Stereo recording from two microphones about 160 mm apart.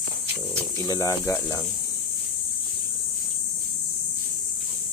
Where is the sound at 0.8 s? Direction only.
20° left (ahead or behind).